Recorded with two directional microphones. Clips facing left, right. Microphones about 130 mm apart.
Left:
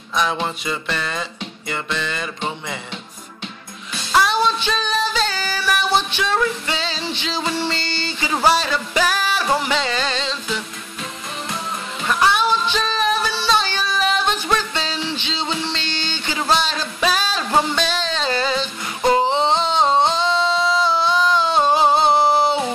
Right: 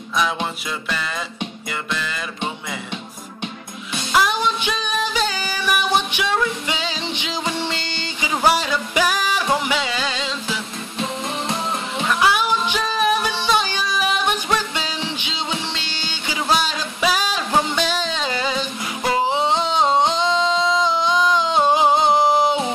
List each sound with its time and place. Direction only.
0.1 s music: 5° right (ahead or behind)
4.3 s music: 15° right (ahead or behind)
12.2 s music: 10° right (ahead or behind)